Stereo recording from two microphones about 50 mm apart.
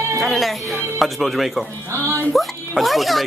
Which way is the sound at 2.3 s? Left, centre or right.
Centre.